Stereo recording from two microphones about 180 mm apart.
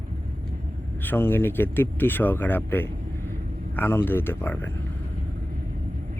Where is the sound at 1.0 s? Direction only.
10° left (ahead or behind).